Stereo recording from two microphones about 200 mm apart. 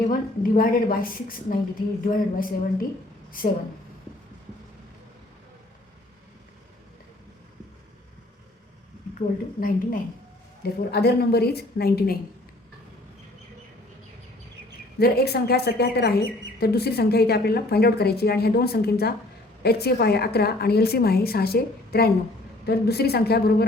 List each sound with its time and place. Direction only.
0.1 s a woman's voice: 45° left (ahead or behind)
9.1 s a woman's voice: 45° left (ahead or behind)
14.9 s a woman's voice: 50° left (ahead or behind)